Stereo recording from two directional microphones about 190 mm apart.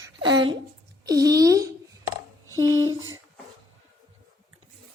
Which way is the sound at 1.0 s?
20° right (ahead or behind).